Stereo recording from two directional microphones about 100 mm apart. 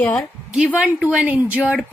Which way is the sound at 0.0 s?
15° left (ahead or behind).